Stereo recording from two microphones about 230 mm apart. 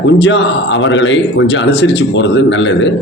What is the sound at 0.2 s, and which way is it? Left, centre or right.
A man's voice, left.